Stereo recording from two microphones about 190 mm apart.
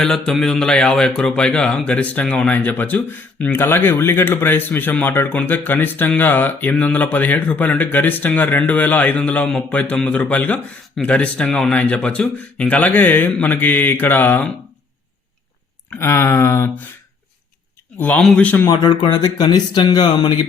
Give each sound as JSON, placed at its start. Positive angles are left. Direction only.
{"t": 0.0, "sound": "speech", "side_deg": 5}
{"t": 15.9, "sound": "speech", "side_deg": 15}
{"t": 18.0, "sound": "speech", "side_deg": 5}